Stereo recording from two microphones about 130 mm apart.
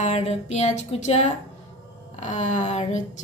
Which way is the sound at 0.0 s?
60° left (ahead or behind).